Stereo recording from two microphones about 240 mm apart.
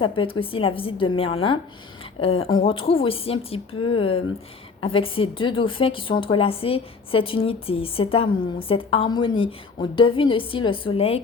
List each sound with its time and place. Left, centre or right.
0.0 s a woman's voice: left